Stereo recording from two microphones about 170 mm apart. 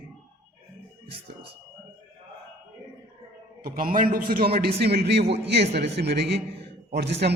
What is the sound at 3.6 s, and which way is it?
A man's voice, 55° right (ahead or behind).